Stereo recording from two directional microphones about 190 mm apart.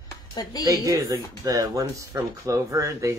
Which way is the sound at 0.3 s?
20° left (ahead or behind).